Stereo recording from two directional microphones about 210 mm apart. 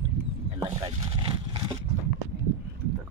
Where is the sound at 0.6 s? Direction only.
20° right (ahead or behind).